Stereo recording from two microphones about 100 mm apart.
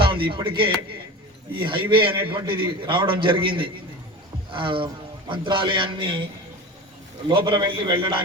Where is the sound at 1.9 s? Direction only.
55° right (ahead or behind).